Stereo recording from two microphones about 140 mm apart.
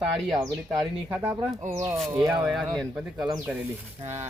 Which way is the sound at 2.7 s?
5° right (ahead or behind).